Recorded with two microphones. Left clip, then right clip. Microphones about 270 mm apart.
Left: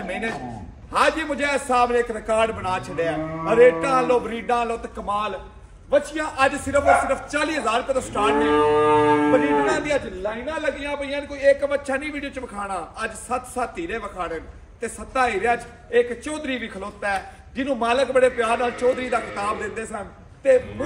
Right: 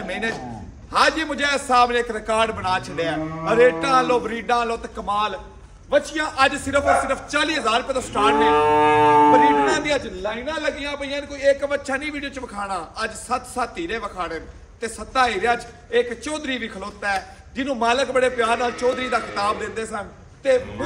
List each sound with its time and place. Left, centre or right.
0.9 s a man's voice: centre
8.6 s music: right
9.7 s a man's voice: centre